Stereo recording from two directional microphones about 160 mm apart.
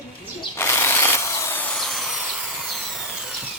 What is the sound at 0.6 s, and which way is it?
Drill, 15° left (ahead or behind).